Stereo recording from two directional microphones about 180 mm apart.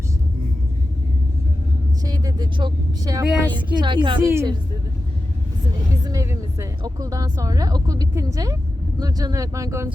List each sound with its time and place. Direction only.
2.0 s a woman's voice: 20° right (ahead or behind)
4.3 s speech: 15° right (ahead or behind)
6.1 s speech: 15° right (ahead or behind)